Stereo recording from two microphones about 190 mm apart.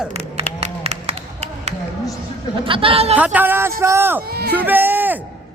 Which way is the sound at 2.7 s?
30° right (ahead or behind).